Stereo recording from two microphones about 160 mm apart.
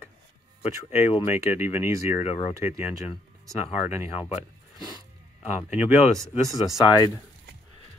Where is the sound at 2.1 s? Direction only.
40° left (ahead or behind).